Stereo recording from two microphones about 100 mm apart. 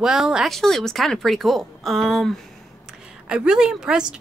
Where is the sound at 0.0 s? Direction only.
5° right (ahead or behind).